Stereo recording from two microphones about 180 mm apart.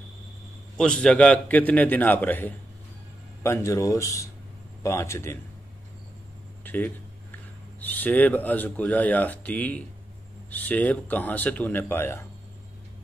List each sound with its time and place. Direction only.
0.7 s speech: 5° left (ahead or behind)
6.6 s a sound: 10° left (ahead or behind)
7.8 s speech: 10° left (ahead or behind)